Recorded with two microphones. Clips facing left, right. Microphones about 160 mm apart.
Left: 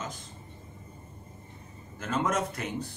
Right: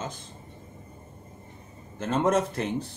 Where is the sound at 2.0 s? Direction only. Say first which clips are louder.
Right 5 dB; 30° right (ahead or behind).